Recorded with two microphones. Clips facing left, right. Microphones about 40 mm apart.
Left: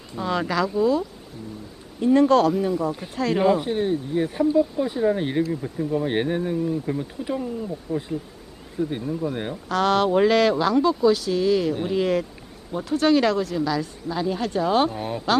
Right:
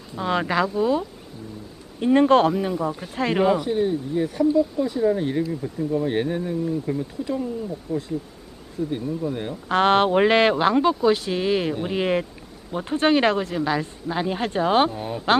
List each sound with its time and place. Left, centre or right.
0.3 s speech: right
2.5 s speech: right
3.6 s speech: left
5.5 s speech: centre
6.1 s speech: left
6.6 s speech: centre
9.6 s speech: right
14.9 s speech: centre